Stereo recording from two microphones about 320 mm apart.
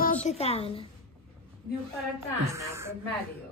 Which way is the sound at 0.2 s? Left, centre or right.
Centre.